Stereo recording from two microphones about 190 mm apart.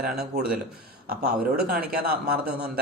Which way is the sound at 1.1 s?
55° right (ahead or behind).